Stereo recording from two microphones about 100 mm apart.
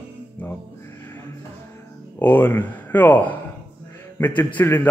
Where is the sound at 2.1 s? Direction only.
20° left (ahead or behind).